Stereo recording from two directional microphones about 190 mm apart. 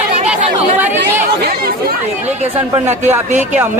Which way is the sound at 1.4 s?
55° right (ahead or behind).